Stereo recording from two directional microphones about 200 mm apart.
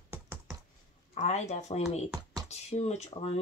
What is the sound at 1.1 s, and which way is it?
Speech, 35° left (ahead or behind).